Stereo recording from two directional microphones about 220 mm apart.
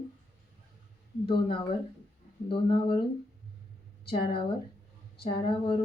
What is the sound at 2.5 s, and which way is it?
Speech, 25° left (ahead or behind).